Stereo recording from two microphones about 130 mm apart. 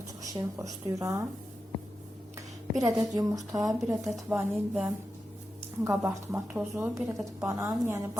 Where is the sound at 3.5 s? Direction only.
25° right (ahead or behind).